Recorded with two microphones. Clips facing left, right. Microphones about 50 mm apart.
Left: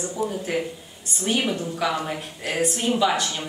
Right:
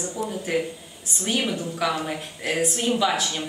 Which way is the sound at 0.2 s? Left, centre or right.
Centre.